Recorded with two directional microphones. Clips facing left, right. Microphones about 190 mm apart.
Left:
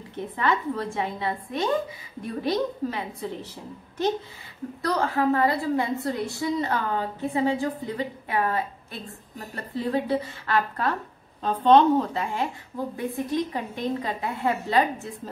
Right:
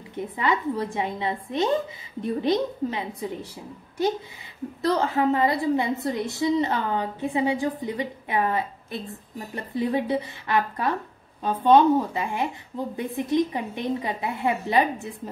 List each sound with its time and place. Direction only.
0.1 s a woman's voice: 15° right (ahead or behind)
4.8 s a woman's voice: 20° right (ahead or behind)